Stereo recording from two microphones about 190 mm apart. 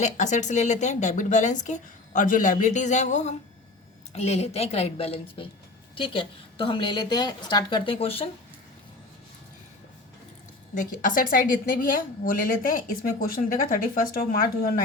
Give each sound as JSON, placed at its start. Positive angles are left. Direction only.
{"t": 0.0, "sound": "a woman's voice", "side_deg": 40}
{"t": 10.8, "sound": "a woman's voice", "side_deg": 45}